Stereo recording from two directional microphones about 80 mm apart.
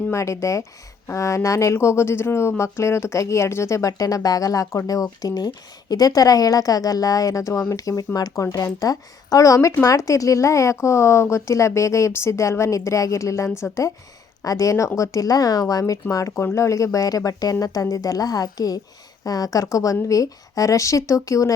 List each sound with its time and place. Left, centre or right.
0.1 s a woman's voice: left